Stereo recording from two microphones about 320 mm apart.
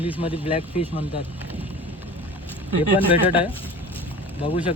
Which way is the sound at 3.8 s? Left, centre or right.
Centre.